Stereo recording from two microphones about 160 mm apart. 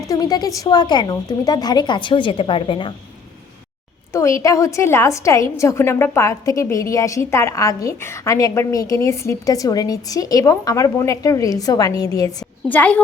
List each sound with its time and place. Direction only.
0.1 s a woman's voice: 25° left (ahead or behind)
4.1 s a woman's voice: 20° left (ahead or behind)
12.6 s a woman's voice: 10° left (ahead or behind)